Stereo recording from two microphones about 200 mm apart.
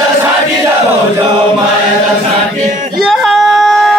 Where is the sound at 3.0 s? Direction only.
Centre (ahead or behind).